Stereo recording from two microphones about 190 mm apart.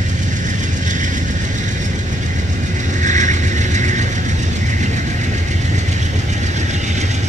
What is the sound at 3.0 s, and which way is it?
Mechanisms, 40° right (ahead or behind).